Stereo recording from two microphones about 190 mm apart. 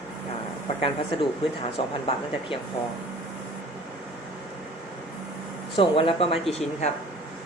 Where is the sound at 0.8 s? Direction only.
25° left (ahead or behind).